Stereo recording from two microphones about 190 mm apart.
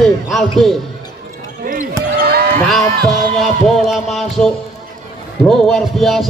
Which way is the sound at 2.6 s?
Centre (ahead or behind).